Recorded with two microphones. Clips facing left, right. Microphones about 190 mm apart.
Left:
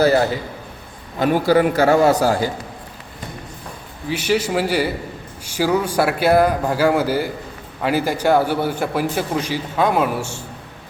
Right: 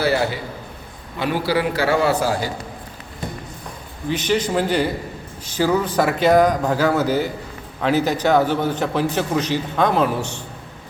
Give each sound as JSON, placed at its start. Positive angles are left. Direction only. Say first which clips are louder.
{"t": 1.2, "sound": "a man's voice", "louder": "left 5 dB", "side_deg": 45}
{"t": 4.1, "sound": "a man's voice", "louder": "left 1 dB", "side_deg": 10}